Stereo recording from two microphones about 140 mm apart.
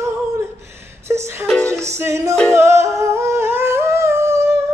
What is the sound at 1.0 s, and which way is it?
Music, 20° right (ahead or behind).